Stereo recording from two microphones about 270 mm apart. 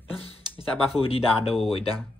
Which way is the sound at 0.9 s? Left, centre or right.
Left.